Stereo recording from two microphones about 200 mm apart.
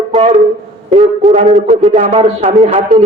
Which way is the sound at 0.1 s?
30° right (ahead or behind).